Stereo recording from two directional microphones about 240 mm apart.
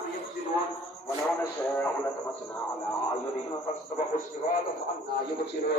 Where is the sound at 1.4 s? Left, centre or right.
Centre.